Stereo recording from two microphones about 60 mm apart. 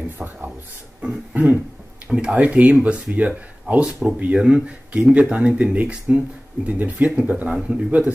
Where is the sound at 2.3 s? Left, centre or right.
Right.